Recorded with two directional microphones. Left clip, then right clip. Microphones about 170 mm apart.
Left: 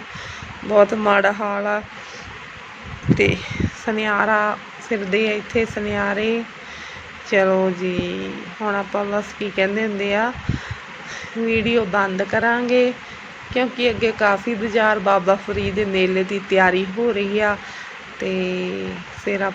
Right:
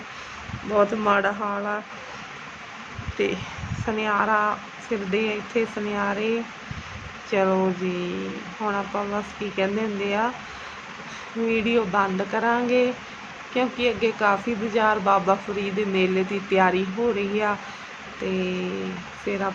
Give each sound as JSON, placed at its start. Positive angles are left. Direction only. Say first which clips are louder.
{"t": 0.7, "sound": "speech", "louder": "left 6 dB", "side_deg": 15}
{"t": 3.8, "sound": "speech", "louder": "left 4 dB", "side_deg": 10}
{"t": 11.4, "sound": "speech", "louder": "left 4 dB", "side_deg": 5}